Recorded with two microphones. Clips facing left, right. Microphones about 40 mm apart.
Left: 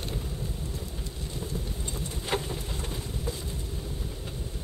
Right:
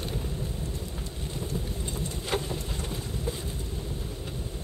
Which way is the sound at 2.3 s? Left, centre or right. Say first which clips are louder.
Even; left.